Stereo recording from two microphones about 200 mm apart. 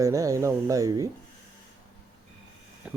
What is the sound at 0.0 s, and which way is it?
Speech, 15° right (ahead or behind).